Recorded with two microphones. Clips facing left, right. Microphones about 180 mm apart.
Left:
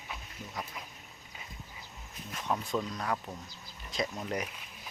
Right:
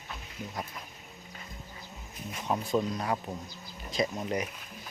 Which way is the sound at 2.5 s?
10° right (ahead or behind).